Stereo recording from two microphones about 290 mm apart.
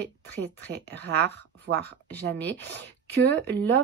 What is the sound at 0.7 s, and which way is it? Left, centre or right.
Speech, right.